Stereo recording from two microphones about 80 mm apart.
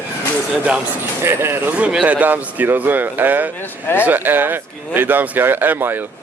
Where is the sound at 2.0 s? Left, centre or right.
Centre.